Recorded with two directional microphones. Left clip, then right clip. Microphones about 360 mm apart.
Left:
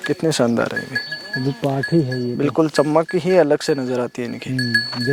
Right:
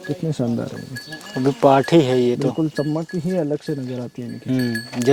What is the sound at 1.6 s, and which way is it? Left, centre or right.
Speech, centre.